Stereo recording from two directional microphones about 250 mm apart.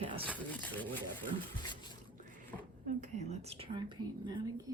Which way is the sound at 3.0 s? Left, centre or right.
Right.